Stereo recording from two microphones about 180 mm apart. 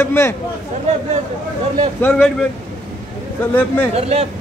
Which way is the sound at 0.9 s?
40° right (ahead or behind).